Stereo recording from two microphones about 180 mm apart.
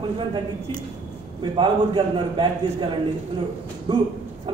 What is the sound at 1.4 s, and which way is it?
A man's voice, 25° right (ahead or behind).